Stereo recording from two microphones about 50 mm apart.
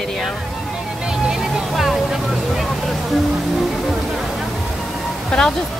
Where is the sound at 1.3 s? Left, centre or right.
Centre.